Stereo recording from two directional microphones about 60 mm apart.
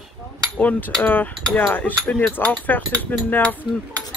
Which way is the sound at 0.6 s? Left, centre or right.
Left.